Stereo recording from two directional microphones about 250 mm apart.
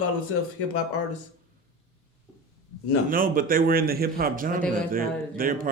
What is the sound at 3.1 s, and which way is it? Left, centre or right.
A man's voice, right.